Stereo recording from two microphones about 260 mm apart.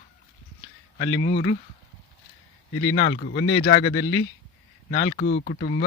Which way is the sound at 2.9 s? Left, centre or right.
Left.